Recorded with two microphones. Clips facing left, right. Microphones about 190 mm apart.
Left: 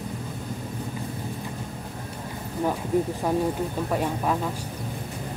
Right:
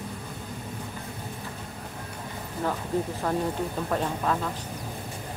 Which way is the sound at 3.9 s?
10° left (ahead or behind).